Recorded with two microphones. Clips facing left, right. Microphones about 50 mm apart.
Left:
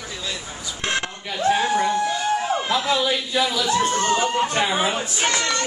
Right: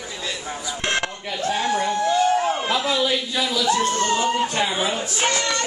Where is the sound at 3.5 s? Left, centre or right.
Left.